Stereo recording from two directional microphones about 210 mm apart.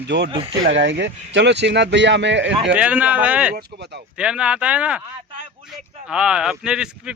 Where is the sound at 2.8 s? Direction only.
5° right (ahead or behind).